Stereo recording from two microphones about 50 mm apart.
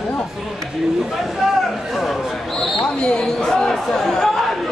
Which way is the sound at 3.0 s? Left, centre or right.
Centre.